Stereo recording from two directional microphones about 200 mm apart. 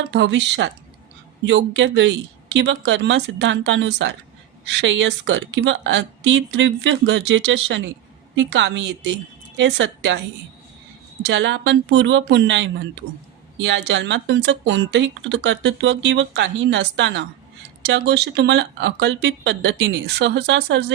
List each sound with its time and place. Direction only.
0.1 s speech: 60° right (ahead or behind)
11.2 s speech: 60° right (ahead or behind)